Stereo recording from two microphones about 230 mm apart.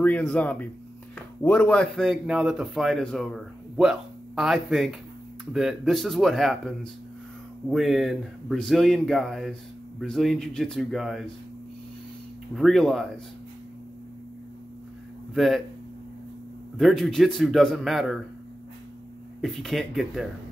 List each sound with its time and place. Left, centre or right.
0.0 s a man's voice: centre
12.5 s a man's voice: centre
15.3 s speech: centre
16.7 s a man's voice: centre
19.4 s a man's voice: centre